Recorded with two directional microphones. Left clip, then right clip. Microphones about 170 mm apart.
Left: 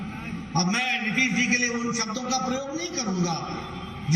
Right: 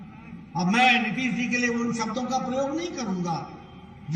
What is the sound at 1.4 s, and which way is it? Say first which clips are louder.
Speech: left 3 dB; 40° right (ahead or behind).